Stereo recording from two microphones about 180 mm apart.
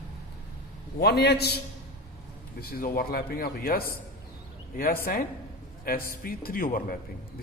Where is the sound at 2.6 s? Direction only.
55° left (ahead or behind).